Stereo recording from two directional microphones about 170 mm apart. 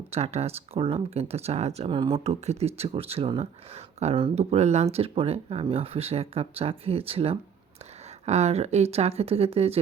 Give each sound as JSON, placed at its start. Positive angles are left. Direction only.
{"t": 0.1, "sound": "speech", "side_deg": -40}